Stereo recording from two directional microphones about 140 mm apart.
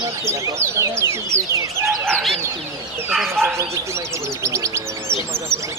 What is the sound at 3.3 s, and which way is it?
Speech, 20° right (ahead or behind).